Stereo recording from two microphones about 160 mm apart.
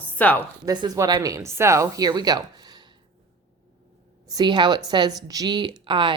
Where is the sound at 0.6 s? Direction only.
25° right (ahead or behind).